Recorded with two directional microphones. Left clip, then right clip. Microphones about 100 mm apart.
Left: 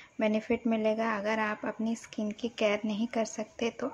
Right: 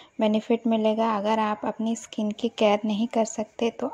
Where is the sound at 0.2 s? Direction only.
40° right (ahead or behind).